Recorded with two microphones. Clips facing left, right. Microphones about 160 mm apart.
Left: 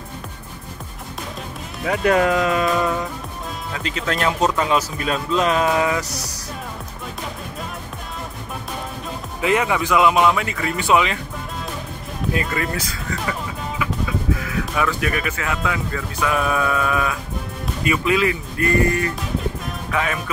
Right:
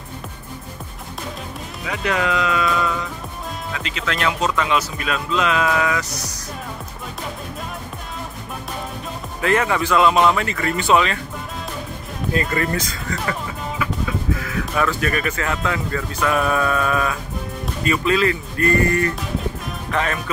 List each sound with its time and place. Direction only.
1.9 s speech: 45° left (ahead or behind); by 6.0 s 30° left (ahead or behind)
9.4 s speech: 15° left (ahead or behind)
12.4 s speech: 5° left (ahead or behind)
19.9 s speech: 5° left (ahead or behind)